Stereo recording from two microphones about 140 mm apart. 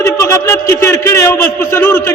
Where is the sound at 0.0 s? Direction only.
20° left (ahead or behind).